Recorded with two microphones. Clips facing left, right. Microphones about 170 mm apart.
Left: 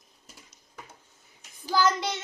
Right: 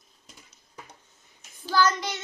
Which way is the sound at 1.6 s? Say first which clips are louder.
Right 1 dB; 20° left (ahead or behind).